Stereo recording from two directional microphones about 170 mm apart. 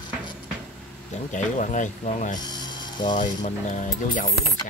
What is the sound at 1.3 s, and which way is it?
Speech, 50° left (ahead or behind).